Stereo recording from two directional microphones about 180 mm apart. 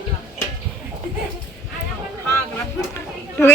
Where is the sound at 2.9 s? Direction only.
10° left (ahead or behind).